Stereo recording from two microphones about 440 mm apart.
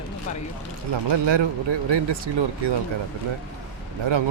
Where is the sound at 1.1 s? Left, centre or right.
Right.